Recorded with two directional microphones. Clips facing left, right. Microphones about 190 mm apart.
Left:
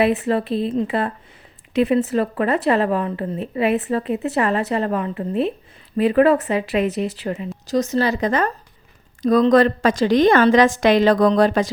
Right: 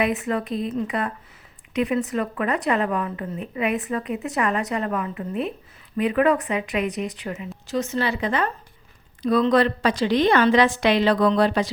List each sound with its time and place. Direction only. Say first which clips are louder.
0.0 s a woman's voice: left 5 dB; 35° left (ahead or behind)